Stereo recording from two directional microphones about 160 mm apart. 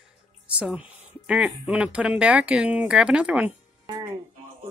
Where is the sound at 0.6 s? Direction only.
5° right (ahead or behind).